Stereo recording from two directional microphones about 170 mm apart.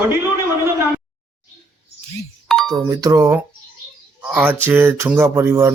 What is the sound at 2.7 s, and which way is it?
Speech, 20° right (ahead or behind).